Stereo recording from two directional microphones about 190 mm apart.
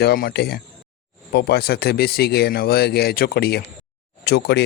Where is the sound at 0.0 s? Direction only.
55° left (ahead or behind).